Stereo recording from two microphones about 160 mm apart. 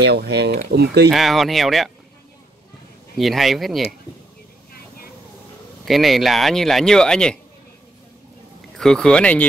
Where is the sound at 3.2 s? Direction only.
Centre (ahead or behind).